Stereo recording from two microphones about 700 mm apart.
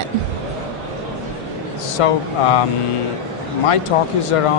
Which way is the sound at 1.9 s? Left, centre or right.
Left.